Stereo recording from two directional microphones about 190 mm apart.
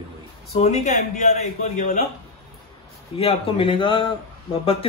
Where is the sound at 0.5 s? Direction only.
35° left (ahead or behind).